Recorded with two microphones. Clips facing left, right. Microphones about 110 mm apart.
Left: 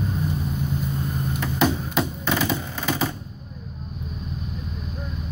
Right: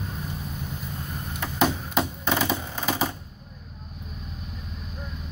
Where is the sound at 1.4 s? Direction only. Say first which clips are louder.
Left 1 dB; 20° right (ahead or behind).